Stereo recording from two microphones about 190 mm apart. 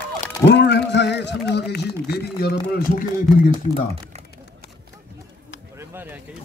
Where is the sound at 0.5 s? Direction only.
60° left (ahead or behind).